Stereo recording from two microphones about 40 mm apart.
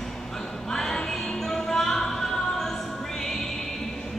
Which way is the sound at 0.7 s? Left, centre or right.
Centre.